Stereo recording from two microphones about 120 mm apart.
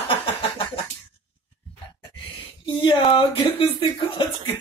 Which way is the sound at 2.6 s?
40° left (ahead or behind).